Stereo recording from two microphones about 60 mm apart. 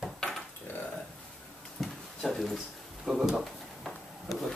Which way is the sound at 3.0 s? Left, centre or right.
Centre.